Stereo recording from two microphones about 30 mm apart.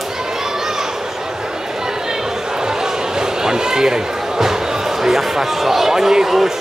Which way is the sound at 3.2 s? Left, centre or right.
Right.